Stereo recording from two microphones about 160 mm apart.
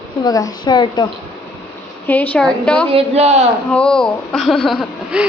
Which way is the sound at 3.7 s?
5° left (ahead or behind).